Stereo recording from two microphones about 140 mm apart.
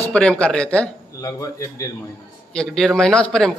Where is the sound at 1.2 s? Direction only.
25° left (ahead or behind).